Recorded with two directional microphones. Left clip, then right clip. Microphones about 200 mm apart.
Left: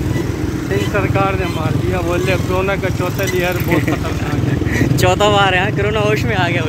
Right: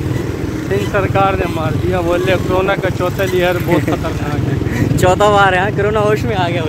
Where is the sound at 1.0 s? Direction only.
55° right (ahead or behind).